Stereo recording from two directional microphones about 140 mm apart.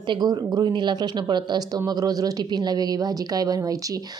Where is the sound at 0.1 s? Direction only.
30° right (ahead or behind).